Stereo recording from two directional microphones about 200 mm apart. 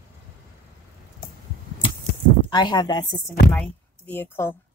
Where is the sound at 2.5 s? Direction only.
20° left (ahead or behind).